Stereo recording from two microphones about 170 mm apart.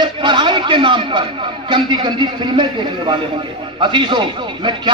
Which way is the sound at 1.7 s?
25° right (ahead or behind).